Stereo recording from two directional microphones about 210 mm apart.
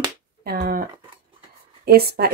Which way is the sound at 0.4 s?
45° right (ahead or behind).